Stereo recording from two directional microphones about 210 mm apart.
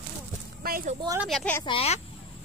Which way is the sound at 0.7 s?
45° right (ahead or behind).